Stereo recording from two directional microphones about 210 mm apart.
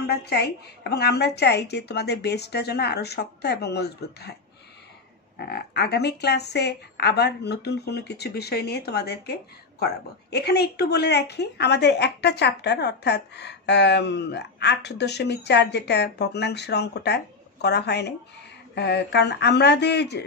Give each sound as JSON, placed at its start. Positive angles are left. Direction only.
{"t": 0.0, "sound": "speech", "side_deg": 50}
{"t": 5.4, "sound": "speech", "side_deg": 50}